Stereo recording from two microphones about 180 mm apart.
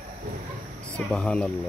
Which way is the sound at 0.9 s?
5° left (ahead or behind).